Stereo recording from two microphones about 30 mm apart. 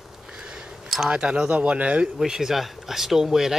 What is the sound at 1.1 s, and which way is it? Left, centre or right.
Speech, right.